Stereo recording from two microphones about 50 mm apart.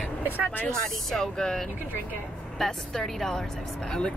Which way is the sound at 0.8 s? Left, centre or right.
Centre.